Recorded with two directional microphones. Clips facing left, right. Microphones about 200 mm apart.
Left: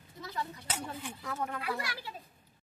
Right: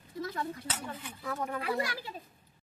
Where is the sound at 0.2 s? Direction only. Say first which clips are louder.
Right 4 dB; 50° right (ahead or behind).